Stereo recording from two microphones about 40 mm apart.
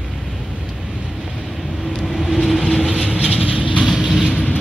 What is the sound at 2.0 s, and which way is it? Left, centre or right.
Vehicle, centre.